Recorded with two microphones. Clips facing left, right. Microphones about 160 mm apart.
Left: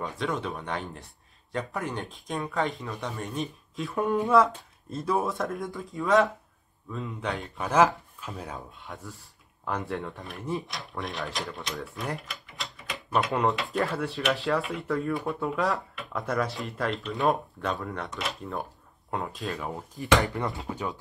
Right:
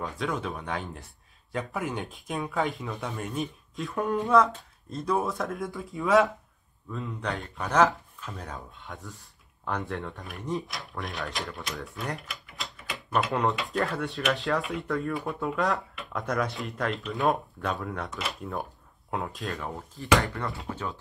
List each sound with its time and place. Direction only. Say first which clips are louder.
0.0 s speech: left 1 dB; centre (ahead or behind)
20.0 s speech: left 1 dB; 20° left (ahead or behind)